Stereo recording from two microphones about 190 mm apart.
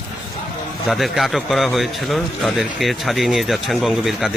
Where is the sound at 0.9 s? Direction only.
Centre (ahead or behind).